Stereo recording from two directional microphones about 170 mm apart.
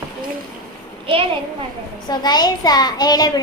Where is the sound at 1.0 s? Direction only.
30° right (ahead or behind).